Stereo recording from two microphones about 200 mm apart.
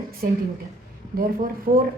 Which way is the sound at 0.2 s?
45° right (ahead or behind).